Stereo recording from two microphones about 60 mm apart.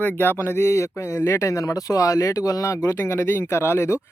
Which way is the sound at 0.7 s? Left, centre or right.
Left.